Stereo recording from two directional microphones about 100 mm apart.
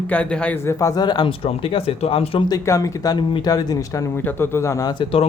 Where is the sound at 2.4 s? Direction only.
35° left (ahead or behind).